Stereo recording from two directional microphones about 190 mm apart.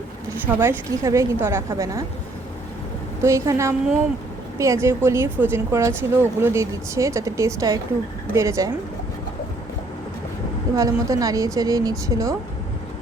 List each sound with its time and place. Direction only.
0.4 s speech: 10° right (ahead or behind)
3.2 s speech: 15° right (ahead or behind)
10.8 s a woman's voice: 20° right (ahead or behind)